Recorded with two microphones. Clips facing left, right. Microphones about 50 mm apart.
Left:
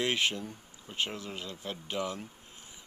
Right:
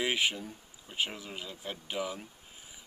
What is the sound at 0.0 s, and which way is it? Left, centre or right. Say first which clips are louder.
Speech: even; centre.